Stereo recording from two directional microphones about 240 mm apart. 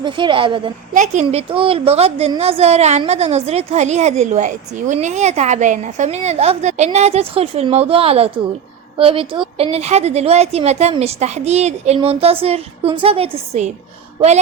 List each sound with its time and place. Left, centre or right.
0.0 s a woman's voice: centre